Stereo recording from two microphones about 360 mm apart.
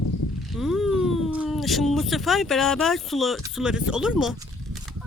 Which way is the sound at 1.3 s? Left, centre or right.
Centre.